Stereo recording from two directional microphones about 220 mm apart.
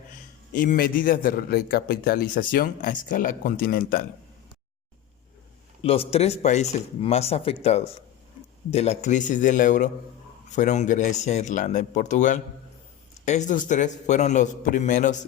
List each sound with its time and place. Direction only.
0.5 s a man's voice: 40° left (ahead or behind)
5.8 s a man's voice: 25° left (ahead or behind)